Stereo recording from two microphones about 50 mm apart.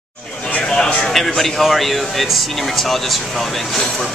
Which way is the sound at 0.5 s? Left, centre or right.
Centre.